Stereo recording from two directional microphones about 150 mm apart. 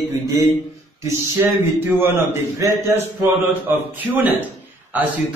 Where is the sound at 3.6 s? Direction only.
15° right (ahead or behind).